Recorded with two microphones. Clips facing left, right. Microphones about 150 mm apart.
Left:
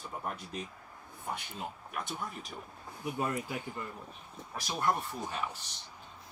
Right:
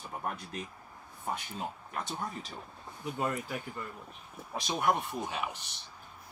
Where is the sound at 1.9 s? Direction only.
25° right (ahead or behind).